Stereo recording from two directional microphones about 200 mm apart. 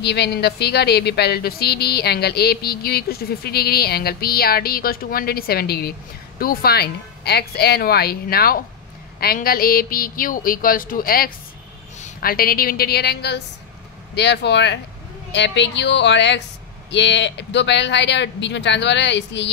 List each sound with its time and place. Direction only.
0.0 s speech: 55° left (ahead or behind)